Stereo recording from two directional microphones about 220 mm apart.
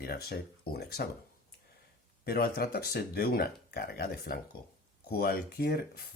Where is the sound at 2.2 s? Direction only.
45° left (ahead or behind).